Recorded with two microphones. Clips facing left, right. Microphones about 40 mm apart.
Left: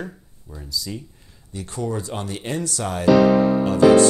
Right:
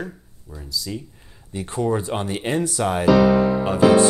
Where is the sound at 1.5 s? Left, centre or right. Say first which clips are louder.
Right 5 dB; right.